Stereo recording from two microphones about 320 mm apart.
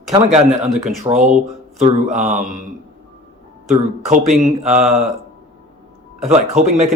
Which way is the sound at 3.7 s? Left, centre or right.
Right.